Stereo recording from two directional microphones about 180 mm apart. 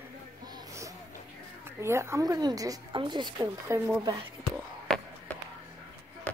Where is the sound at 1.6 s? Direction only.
15° right (ahead or behind).